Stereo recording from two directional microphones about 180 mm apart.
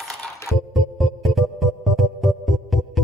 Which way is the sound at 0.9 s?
Centre (ahead or behind).